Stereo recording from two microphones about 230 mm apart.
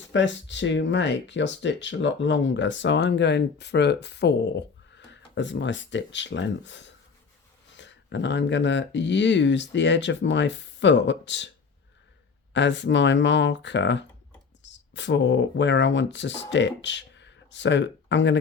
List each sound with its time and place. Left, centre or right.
0.1 s speech: left
12.5 s speech: left